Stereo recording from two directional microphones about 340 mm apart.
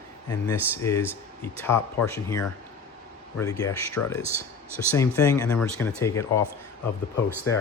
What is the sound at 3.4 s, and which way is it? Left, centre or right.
Speech, centre.